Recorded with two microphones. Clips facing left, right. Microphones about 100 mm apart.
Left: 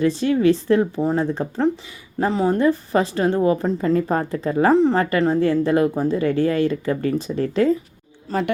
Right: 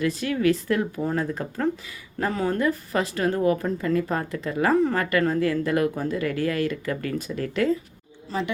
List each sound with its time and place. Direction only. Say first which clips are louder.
0.0 s speech: left 6 dB; 30° left (ahead or behind)
8.3 s speech: left 6 dB; 50° left (ahead or behind)